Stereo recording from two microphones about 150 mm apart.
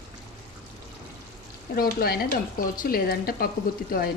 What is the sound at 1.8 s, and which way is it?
Speech, 80° left.